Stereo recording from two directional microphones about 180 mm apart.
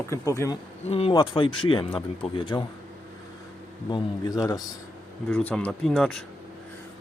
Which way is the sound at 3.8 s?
25° left (ahead or behind).